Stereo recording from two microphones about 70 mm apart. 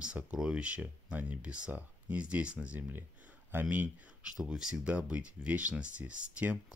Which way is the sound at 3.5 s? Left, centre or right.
Right.